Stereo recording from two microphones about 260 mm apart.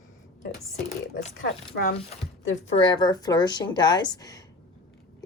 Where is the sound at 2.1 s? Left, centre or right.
Left.